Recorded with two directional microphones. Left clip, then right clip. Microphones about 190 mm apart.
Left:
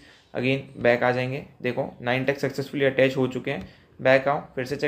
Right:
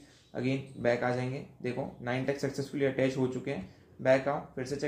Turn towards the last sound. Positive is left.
turn(degrees=15)  # may be behind; listen again after turning